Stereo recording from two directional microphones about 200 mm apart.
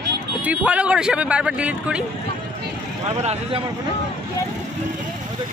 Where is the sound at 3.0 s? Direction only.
35° right (ahead or behind).